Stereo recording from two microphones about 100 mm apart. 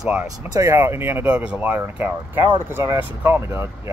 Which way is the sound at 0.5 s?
30° right (ahead or behind).